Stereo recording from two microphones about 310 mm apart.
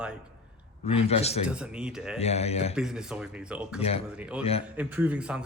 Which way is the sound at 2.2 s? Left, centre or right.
Centre.